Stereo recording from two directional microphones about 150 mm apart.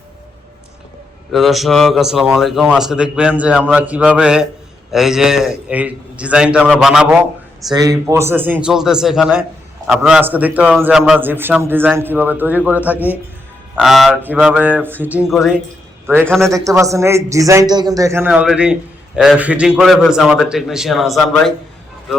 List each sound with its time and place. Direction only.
1.3 s a man's voice: centre (ahead or behind)
7.7 s a man's voice: 25° right (ahead or behind); by 15.6 s 5° right (ahead or behind)
16.1 s a man's voice: 15° right (ahead or behind); by 21.5 s centre (ahead or behind)